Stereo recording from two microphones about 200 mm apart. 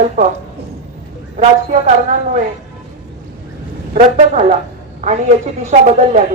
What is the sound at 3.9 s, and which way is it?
Speech, 35° right (ahead or behind).